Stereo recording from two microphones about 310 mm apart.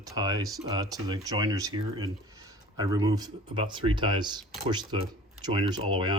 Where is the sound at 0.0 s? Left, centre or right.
Centre.